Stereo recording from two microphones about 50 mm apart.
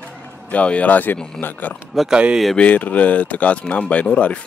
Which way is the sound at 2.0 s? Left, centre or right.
Centre.